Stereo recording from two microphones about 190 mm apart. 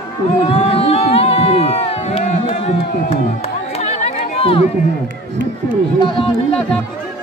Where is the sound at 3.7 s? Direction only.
35° left (ahead or behind).